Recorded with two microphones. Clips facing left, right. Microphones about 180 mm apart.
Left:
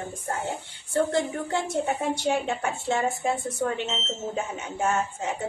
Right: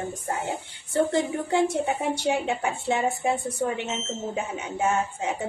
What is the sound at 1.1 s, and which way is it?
A woman's voice, 15° right (ahead or behind).